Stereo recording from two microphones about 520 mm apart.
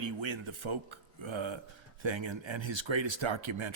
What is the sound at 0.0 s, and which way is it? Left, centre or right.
Speech, right.